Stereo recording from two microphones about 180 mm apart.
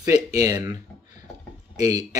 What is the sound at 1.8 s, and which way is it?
Speech, 20° right (ahead or behind).